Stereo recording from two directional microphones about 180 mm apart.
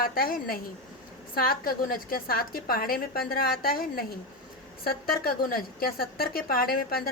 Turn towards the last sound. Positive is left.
turn(degrees=55)  # may be behind; listen again after turning